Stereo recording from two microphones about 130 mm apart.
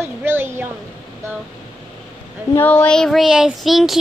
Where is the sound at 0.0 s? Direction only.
15° right (ahead or behind).